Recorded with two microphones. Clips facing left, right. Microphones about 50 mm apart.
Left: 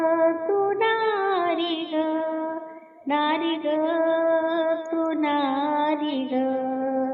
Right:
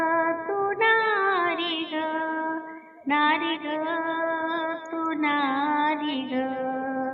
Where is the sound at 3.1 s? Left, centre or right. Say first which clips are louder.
Even; right.